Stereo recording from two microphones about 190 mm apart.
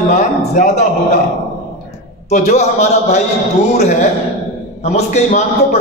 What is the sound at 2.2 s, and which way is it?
Speech, 35° left (ahead or behind).